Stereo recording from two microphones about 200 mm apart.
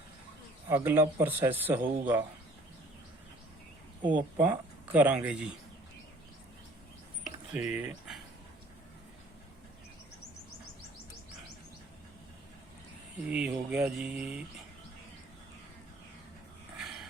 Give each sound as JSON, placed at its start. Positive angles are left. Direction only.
{"t": 0.7, "sound": "a man's voice", "side_deg": -10}
{"t": 4.4, "sound": "a man's voice", "side_deg": -10}
{"t": 7.5, "sound": "speech", "side_deg": -5}
{"t": 13.2, "sound": "a man's voice", "side_deg": -5}
{"t": 16.7, "sound": "dog", "side_deg": 0}